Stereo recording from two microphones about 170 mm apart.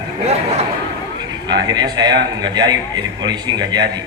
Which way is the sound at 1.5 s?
25° right (ahead or behind).